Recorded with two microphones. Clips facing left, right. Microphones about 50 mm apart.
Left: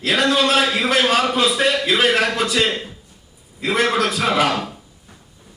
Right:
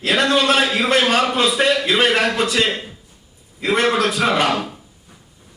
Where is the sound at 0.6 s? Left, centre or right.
Centre.